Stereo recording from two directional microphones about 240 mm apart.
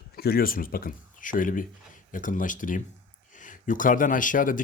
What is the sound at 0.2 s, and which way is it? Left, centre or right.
Speech, left.